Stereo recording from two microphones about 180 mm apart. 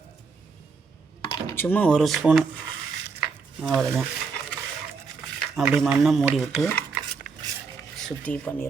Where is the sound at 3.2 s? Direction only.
Centre (ahead or behind).